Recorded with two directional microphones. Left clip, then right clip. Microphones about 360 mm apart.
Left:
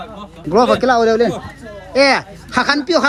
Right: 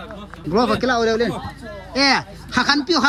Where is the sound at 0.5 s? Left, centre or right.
Centre.